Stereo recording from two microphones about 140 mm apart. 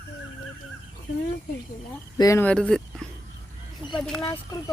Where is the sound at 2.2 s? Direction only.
25° left (ahead or behind).